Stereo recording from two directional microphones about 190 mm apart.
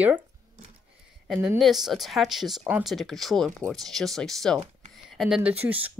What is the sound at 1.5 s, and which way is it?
Speech, centre (ahead or behind).